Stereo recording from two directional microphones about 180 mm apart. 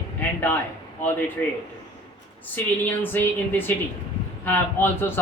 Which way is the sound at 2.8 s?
10° left (ahead or behind).